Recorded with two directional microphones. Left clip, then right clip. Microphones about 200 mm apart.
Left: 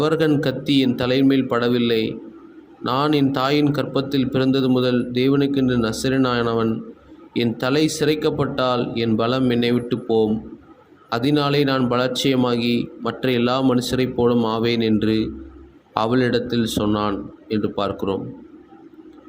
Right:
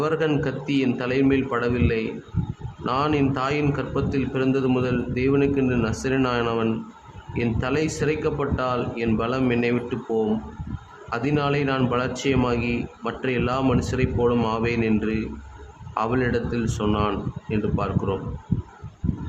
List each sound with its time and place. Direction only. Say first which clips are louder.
0.0 s speech: left 4 dB; 15° left (ahead or behind)
16.0 s speech: left 4 dB; 15° left (ahead or behind)